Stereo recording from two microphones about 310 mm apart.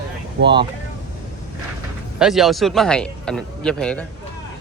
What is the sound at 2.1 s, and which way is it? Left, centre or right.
A man's voice, centre.